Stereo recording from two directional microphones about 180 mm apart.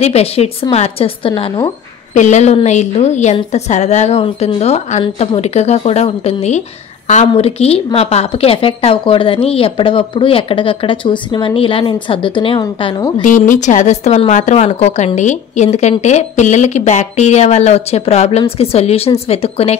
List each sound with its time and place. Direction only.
0.0 s a woman's voice: 35° left (ahead or behind)
2.1 s a woman's voice: 40° left (ahead or behind); by 13.1 s 25° left (ahead or behind)
13.2 s a woman's voice: 45° left (ahead or behind)